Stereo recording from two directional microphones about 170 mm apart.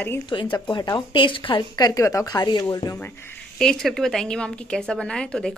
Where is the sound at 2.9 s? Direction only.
15° left (ahead or behind).